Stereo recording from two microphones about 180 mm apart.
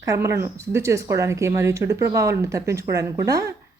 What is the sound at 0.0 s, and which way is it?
Speech, 15° right (ahead or behind).